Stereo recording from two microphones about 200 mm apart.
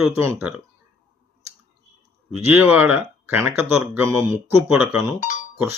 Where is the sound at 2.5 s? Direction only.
10° right (ahead or behind).